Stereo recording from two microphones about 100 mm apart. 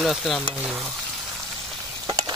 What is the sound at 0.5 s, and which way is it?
Frying, 10° right (ahead or behind).